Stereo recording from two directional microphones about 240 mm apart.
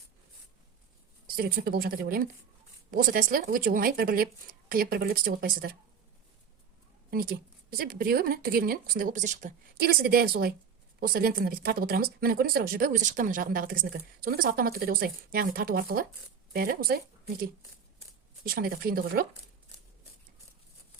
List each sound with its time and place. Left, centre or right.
1.4 s speech: right
7.1 s speech: right